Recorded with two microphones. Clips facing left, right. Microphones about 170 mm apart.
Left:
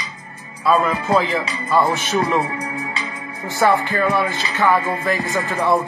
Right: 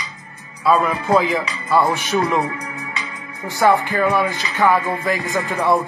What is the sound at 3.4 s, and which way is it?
Speech, 15° right (ahead or behind).